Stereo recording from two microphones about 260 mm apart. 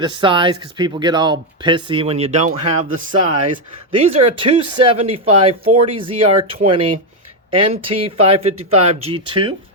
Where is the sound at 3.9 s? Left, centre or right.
Centre.